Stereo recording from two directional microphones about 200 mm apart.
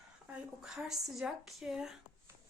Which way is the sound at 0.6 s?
Centre (ahead or behind).